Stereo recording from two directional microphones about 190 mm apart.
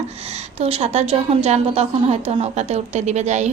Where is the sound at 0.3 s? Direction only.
35° right (ahead or behind).